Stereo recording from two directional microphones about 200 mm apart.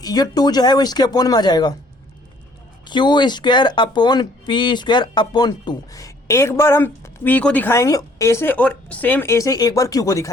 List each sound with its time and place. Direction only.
0.0 s speech: 20° left (ahead or behind)
2.8 s speech: 20° left (ahead or behind)